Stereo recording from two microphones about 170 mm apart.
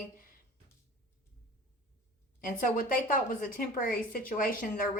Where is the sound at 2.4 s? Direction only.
55° left (ahead or behind).